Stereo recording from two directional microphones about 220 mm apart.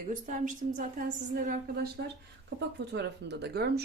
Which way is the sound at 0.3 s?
35° right (ahead or behind).